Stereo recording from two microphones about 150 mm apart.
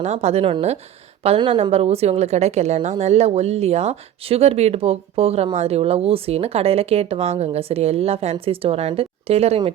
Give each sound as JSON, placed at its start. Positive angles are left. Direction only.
{"t": 0.0, "sound": "a woman's voice", "side_deg": -45}